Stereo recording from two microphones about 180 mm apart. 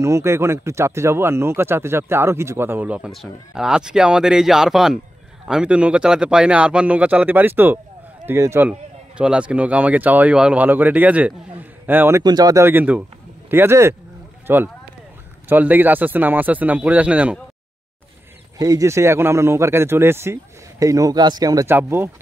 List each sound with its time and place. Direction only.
0.0 s speech: 15° right (ahead or behind)
12.2 s speech: 20° right (ahead or behind)
18.6 s speech: 20° right (ahead or behind)